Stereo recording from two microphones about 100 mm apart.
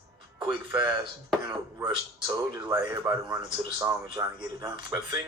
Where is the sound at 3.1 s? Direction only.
30° right (ahead or behind).